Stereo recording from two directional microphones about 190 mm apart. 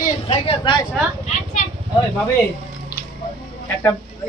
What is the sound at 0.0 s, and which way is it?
Speech, 30° left (ahead or behind).